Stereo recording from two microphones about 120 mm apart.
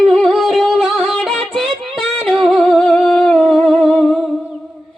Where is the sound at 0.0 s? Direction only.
5° left (ahead or behind).